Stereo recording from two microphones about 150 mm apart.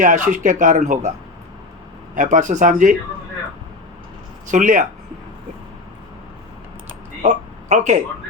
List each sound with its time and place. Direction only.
0.0 s speech: 60° right (ahead or behind)
2.1 s speech: 55° right (ahead or behind)
4.4 s speech: 55° right (ahead or behind)
7.2 s speech: 50° right (ahead or behind)